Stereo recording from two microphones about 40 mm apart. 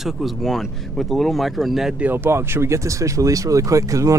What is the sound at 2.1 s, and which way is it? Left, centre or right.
Speech, right.